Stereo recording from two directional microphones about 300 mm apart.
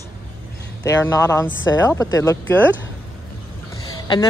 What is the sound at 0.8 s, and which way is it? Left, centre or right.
Speech, centre.